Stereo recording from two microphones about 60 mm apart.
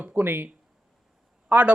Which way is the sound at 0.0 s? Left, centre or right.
Right.